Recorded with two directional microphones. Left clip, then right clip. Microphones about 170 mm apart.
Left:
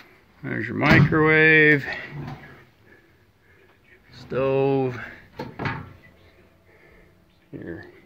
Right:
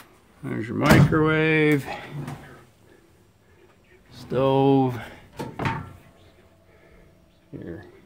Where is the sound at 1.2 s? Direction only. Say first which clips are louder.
Left 5 dB; 10° right (ahead or behind).